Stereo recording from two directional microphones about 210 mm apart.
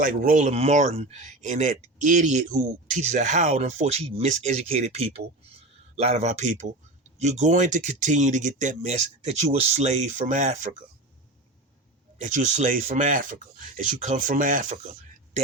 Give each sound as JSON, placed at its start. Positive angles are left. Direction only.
{"t": 0.0, "sound": "speech", "side_deg": -40}
{"t": 12.2, "sound": "speech", "side_deg": -35}